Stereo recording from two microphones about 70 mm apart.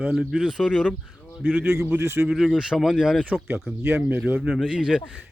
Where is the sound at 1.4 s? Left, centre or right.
Right.